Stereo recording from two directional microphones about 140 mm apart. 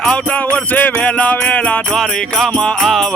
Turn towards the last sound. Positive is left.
turn(degrees=5)  # may be behind; listen again after turning